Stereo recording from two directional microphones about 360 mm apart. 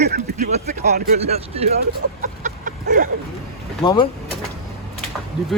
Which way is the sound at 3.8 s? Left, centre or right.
Centre.